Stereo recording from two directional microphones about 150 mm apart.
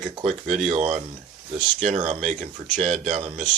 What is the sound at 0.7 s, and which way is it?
Speech, 45° right (ahead or behind).